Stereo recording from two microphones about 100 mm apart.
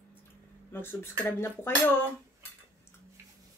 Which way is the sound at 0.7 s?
20° left (ahead or behind).